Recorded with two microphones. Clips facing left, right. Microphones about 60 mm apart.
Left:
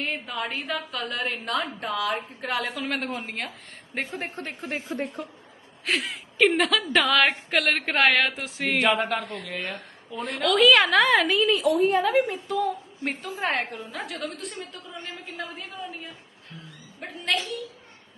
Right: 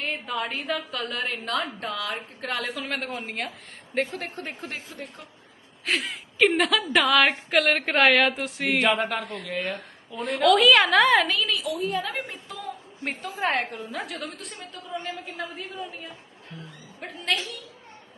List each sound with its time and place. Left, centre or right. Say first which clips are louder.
0.0 s a woman's voice: right 1 dB; centre
4.0 s a woman's voice: even; centre
4.6 s a woman's voice: left 5 dB; left
5.8 s a woman's voice: even; centre
11.5 s a woman's voice: left 7 dB; left
12.0 s a woman's voice: left 10 dB; centre
17.0 s a woman's voice: left 1 dB; centre